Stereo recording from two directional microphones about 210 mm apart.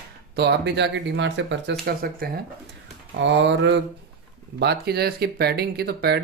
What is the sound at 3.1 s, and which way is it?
Speech, 60° right (ahead or behind).